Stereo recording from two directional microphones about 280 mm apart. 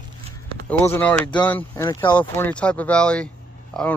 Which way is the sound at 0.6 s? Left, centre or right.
Centre.